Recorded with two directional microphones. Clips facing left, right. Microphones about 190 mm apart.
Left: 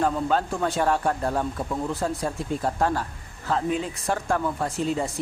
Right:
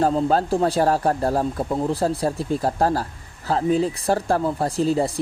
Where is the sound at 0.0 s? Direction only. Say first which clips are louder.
Right 4 dB; 30° right (ahead or behind).